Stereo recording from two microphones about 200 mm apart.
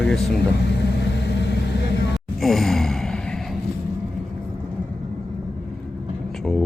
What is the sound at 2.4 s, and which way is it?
Gasp, centre (ahead or behind).